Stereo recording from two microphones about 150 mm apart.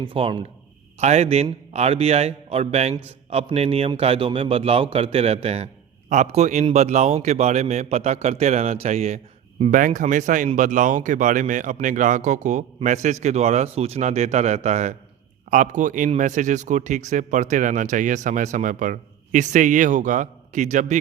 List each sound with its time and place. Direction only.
0.0 s a man's voice: 35° right (ahead or behind)
0.9 s a man's voice: 45° right (ahead or behind)